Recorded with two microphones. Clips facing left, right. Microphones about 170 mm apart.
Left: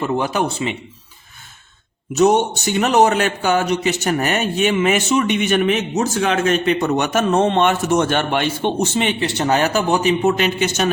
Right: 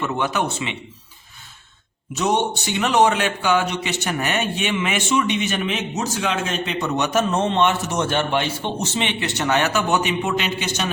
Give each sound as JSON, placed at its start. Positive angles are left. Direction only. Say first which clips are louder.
{"t": 0.0, "sound": "a man's voice", "louder": "left 3 dB", "side_deg": 35}
{"t": 2.1, "sound": "a man's voice", "louder": "left 6 dB", "side_deg": 45}
{"t": 5.4, "sound": "a man's voice", "louder": "left 7 dB", "side_deg": 55}
{"t": 9.2, "sound": "a man's voice", "louder": "left 2 dB", "side_deg": 35}